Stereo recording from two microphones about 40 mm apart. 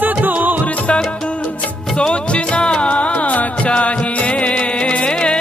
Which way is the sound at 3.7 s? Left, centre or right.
Left.